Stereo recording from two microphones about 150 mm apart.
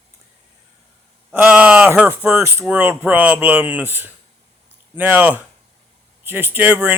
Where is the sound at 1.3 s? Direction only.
10° right (ahead or behind).